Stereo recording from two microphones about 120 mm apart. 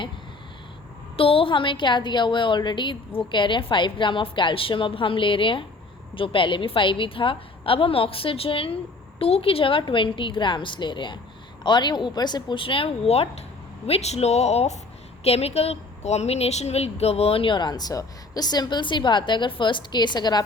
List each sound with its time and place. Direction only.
1.1 s speech: 50° left (ahead or behind)